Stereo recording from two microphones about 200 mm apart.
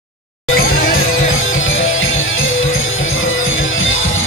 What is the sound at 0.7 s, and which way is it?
Music, 90° left.